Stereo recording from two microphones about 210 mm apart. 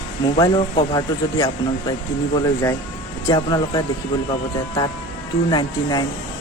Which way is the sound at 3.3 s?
20° left (ahead or behind).